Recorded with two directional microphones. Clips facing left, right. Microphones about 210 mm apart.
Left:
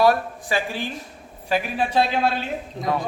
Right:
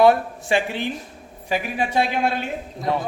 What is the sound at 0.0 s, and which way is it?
A man's voice, 25° right (ahead or behind).